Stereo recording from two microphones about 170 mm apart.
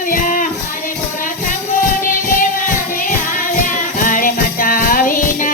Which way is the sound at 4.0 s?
55° left (ahead or behind).